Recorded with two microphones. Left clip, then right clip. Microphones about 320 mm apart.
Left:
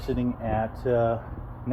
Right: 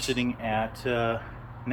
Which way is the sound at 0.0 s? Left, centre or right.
Centre.